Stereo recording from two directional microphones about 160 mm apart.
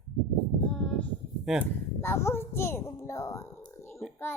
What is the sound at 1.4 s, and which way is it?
Speech, 5° right (ahead or behind).